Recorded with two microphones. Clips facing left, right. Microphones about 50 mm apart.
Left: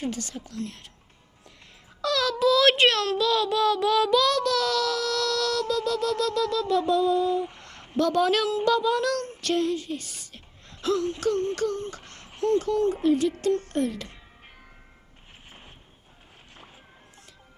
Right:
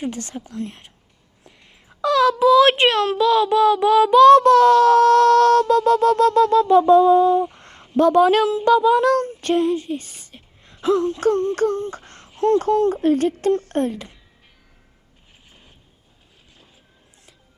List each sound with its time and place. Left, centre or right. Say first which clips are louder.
0.0 s speech: right 4 dB; right
2.0 s a child's voice: right 8 dB; right
7.9 s speech: right 8 dB; right
8.6 s child singing: right 10 dB; right
11.5 s a child's voice: right 7 dB; right
11.9 s babbling: right 6 dB; right
12.4 s a child's voice: right 6 dB; right